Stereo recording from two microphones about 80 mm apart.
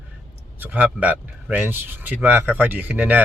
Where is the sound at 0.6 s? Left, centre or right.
Centre.